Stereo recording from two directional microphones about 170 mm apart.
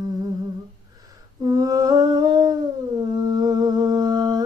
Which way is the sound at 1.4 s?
20° right (ahead or behind).